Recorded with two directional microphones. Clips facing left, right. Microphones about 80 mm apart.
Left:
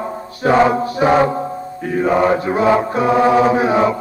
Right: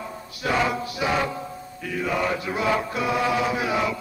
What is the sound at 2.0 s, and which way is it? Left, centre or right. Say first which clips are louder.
Mantra: left 11 dB; left.